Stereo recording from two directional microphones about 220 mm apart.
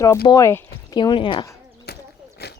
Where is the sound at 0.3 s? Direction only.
15° left (ahead or behind).